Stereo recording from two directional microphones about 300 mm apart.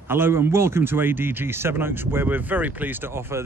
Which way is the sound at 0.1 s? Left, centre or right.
Centre.